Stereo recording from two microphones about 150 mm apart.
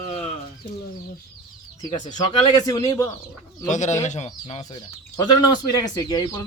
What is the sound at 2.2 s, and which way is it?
Speech, 25° left (ahead or behind).